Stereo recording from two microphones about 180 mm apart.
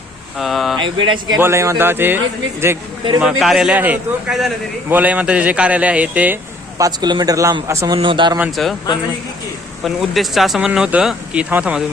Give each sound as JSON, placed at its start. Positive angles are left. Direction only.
{"t": 0.3, "sound": "speech", "side_deg": 0}
{"t": 0.8, "sound": "speech", "side_deg": -25}
{"t": 1.4, "sound": "a man's voice", "side_deg": -15}
{"t": 8.4, "sound": "speech", "side_deg": 0}
{"t": 9.8, "sound": "speech", "side_deg": 0}